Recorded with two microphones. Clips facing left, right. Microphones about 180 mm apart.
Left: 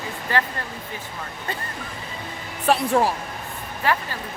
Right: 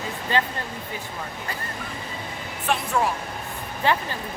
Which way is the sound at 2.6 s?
35° left (ahead or behind).